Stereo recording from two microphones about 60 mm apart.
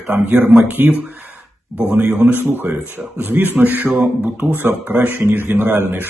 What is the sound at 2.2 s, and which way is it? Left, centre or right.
Speech, right.